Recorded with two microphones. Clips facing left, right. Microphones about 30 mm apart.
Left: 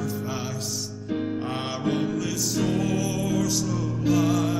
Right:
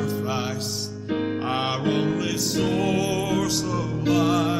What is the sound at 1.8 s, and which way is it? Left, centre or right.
Music, centre.